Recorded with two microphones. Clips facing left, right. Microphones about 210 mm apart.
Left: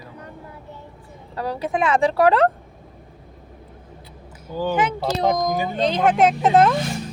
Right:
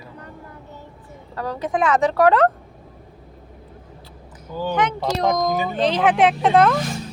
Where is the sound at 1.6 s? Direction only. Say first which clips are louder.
Right 1 dB; 25° left (ahead or behind).